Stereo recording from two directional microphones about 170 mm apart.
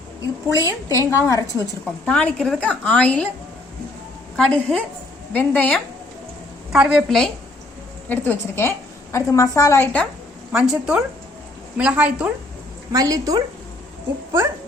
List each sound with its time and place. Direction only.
0.4 s a woman's voice: 20° left (ahead or behind)
2.0 s a woman's voice: 5° left (ahead or behind)
4.4 s a woman's voice: 5° left (ahead or behind)
6.7 s a woman's voice: 5° right (ahead or behind)
8.0 s a woman's voice: 10° left (ahead or behind)
10.5 s a woman's voice: 5° right (ahead or behind)
12.9 s a woman's voice: 20° right (ahead or behind)